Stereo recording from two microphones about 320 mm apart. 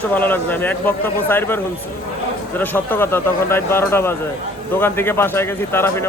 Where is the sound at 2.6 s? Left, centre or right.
Centre.